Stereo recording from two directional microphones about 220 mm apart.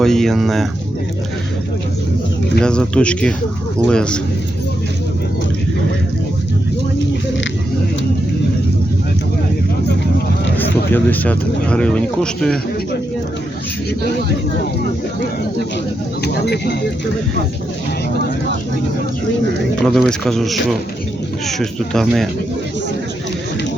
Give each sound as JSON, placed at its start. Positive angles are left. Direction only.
{"t": 0.0, "sound": "speech", "side_deg": 0}
{"t": 2.6, "sound": "speech", "side_deg": 5}
{"t": 10.9, "sound": "speech", "side_deg": 5}
{"t": 16.2, "sound": "speech", "side_deg": 50}
{"t": 19.9, "sound": "speech", "side_deg": 0}